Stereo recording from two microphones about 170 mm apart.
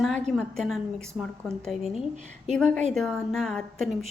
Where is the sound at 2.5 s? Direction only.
5° left (ahead or behind).